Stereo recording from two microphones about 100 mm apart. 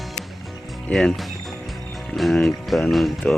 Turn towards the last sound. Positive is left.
turn(degrees=0)  # may be behind; listen again after turning